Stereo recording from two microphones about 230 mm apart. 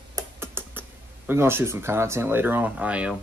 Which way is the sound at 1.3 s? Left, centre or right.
Centre.